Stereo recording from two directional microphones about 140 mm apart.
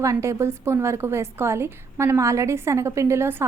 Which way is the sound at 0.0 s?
20° right (ahead or behind).